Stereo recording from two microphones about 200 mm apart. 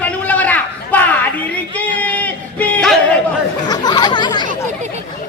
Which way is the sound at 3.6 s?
20° left (ahead or behind).